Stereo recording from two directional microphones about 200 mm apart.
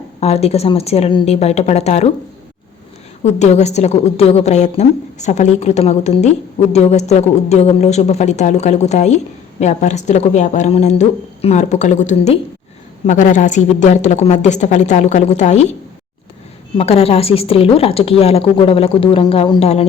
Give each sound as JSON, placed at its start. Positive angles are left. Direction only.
{"t": 0.2, "sound": "a woman's voice", "side_deg": 30}
{"t": 3.2, "sound": "a woman's voice", "side_deg": 35}
{"t": 16.7, "sound": "a woman's voice", "side_deg": 30}